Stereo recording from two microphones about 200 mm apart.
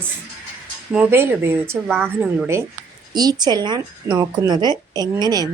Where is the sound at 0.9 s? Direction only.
10° right (ahead or behind).